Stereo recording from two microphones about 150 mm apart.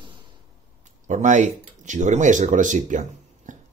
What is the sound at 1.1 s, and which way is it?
Speech, 55° right (ahead or behind).